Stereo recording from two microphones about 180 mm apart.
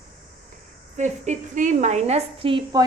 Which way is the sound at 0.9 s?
40° right (ahead or behind).